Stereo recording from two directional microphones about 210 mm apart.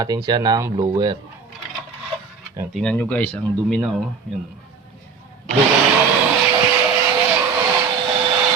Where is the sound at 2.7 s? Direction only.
5° left (ahead or behind).